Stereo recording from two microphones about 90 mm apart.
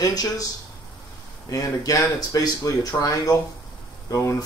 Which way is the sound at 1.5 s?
40° left (ahead or behind).